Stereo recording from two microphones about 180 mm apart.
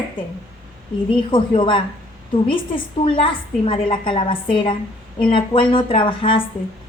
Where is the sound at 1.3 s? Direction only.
30° left (ahead or behind).